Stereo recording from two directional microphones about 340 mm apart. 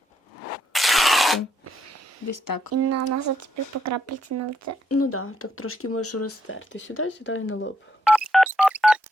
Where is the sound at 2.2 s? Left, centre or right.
Left.